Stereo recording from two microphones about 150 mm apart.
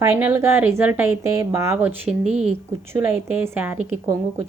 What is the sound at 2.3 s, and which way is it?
Speech, 50° right (ahead or behind).